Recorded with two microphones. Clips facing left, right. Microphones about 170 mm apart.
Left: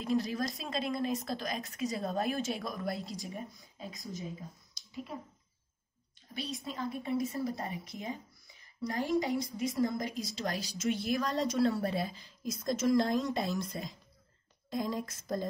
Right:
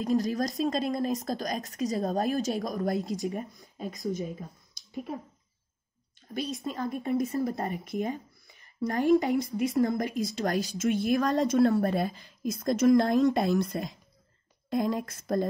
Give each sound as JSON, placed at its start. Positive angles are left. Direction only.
{"t": 0.0, "sound": "a woman's voice", "side_deg": -40}
{"t": 6.6, "sound": "a woman's voice", "side_deg": -45}